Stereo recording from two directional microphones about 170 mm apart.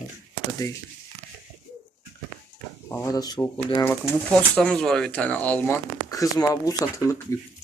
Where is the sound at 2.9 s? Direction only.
15° left (ahead or behind).